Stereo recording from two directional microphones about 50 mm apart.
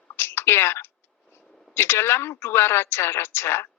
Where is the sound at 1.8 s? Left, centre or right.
Left.